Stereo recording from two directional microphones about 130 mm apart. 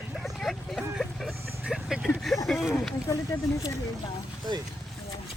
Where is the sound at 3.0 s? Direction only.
25° left (ahead or behind).